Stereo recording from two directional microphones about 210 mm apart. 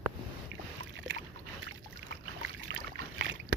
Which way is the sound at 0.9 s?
60° right (ahead or behind).